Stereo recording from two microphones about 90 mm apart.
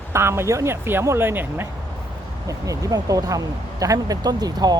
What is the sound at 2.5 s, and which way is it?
Speech, 40° right (ahead or behind).